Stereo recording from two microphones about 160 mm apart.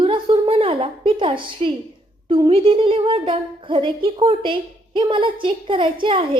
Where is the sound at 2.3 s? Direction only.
35° right (ahead or behind).